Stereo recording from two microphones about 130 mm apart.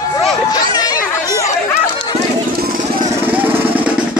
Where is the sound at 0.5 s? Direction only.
30° left (ahead or behind).